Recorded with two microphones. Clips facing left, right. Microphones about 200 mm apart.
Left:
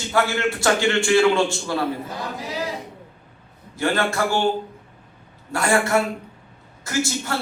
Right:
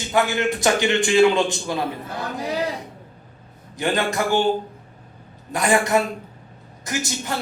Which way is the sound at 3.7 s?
20° right (ahead or behind).